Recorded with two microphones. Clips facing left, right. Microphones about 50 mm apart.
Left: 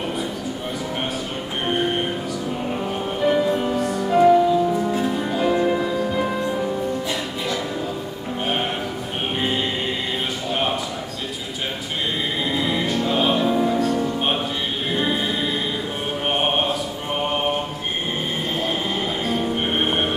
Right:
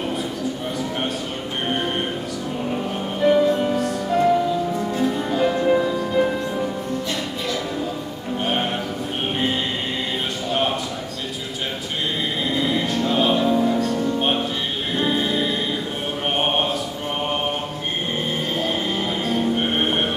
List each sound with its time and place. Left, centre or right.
1.7 s music: centre
10.5 s a sound: centre
12.4 s music: centre
16.3 s mantra: centre
18.6 s music: centre